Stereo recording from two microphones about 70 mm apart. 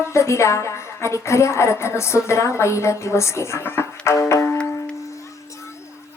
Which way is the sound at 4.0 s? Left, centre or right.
Left.